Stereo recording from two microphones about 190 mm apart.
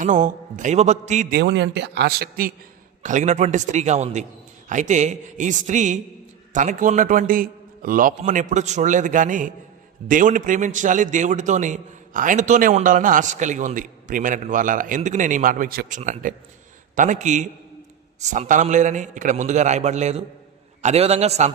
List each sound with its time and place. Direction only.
0.0 s a man's voice: 40° right (ahead or behind)
1.3 s a man's voice: 65° right (ahead or behind)
3.0 s a man's voice: 40° right (ahead or behind)